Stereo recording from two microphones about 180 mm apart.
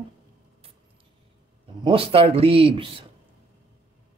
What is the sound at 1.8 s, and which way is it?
Speech, 30° right (ahead or behind).